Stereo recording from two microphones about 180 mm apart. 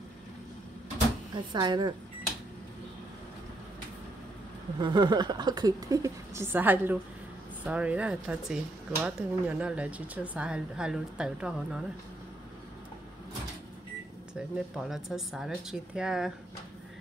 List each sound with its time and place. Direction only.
1.3 s a woman's voice: 25° right (ahead or behind)
4.7 s a woman's voice: 25° right (ahead or behind); by 11.8 s 5° right (ahead or behind)
14.8 s speech: centre (ahead or behind)